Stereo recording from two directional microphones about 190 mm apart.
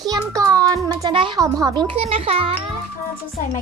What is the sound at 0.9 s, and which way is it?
A child's voice, 25° right (ahead or behind).